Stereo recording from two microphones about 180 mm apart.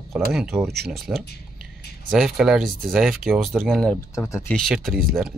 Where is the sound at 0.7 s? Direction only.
60° right (ahead or behind).